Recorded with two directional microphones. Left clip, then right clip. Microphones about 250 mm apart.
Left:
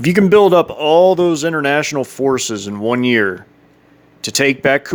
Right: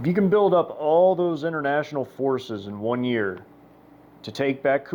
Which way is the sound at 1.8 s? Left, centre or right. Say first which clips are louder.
Left 9 dB; left.